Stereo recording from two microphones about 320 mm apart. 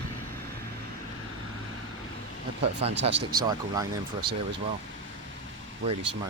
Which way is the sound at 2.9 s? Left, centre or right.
Right.